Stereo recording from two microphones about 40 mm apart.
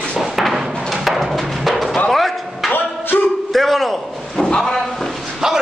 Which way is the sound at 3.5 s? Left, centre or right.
Centre.